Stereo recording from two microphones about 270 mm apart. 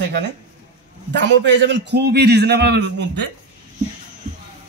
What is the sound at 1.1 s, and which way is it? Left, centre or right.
Speech, right.